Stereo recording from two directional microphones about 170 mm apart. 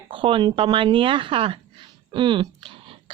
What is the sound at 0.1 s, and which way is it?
Speech, 30° right (ahead or behind).